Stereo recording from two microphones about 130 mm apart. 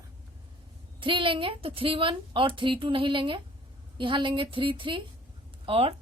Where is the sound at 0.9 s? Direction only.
40° right (ahead or behind).